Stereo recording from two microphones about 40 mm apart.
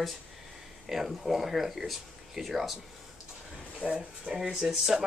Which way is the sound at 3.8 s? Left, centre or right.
Centre.